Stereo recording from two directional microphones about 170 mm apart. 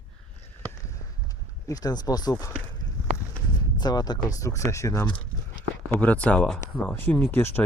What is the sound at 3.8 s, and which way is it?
Speech, 25° left (ahead or behind).